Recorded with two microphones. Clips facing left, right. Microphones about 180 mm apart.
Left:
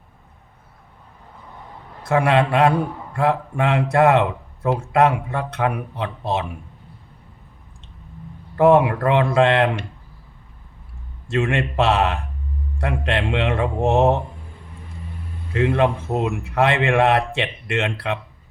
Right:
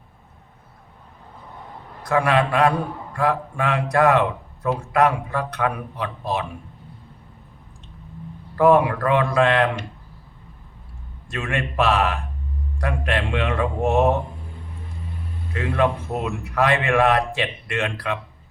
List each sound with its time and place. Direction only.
2.0 s a man's voice: 25° left (ahead or behind)
8.5 s a man's voice: 25° left (ahead or behind)
11.3 s a man's voice: 25° left (ahead or behind)
15.5 s a man's voice: 25° left (ahead or behind)